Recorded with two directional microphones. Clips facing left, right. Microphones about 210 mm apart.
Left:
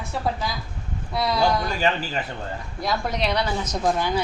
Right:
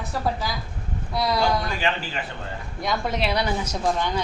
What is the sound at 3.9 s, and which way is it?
Speech, 5° left (ahead or behind).